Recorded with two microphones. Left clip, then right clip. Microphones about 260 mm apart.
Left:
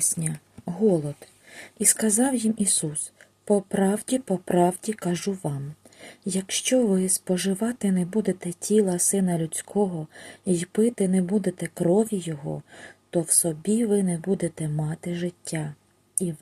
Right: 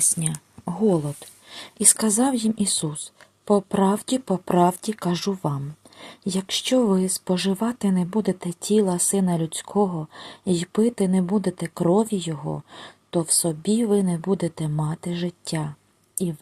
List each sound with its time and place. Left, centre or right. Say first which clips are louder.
0.0 s speech: right 3 dB; centre